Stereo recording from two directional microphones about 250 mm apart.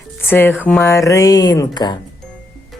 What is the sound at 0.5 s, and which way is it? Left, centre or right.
Speech, centre.